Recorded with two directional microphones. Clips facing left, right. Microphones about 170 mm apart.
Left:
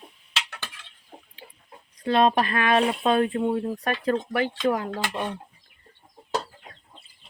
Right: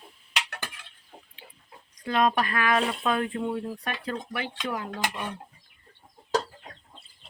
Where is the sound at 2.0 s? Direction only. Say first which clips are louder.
Left 4 dB; 30° left (ahead or behind).